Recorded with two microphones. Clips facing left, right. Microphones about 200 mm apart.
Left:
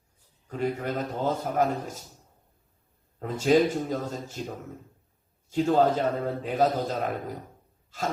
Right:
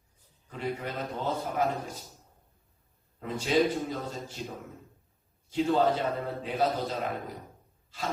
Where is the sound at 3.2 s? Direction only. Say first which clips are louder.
Left 4 dB; 45° left (ahead or behind).